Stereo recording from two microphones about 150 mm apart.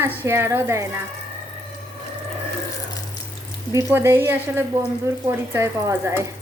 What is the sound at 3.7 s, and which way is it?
A woman's voice, 20° right (ahead or behind).